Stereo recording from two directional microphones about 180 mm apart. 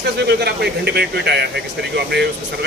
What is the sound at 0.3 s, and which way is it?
Speech, 65° right (ahead or behind).